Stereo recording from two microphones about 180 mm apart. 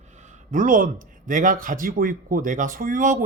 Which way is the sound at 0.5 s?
45° right (ahead or behind).